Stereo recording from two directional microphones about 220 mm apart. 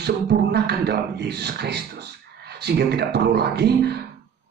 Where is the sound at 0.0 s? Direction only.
50° right (ahead or behind).